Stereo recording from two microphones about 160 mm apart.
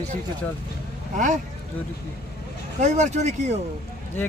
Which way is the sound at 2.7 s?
45° right (ahead or behind).